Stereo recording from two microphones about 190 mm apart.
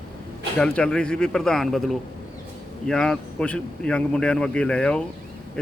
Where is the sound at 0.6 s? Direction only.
5° left (ahead or behind).